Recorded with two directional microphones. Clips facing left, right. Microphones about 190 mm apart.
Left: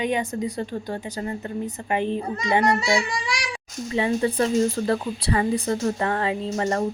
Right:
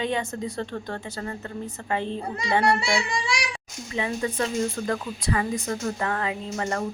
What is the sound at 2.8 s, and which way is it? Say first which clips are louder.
Speech: left 3 dB; 30° right (ahead or behind).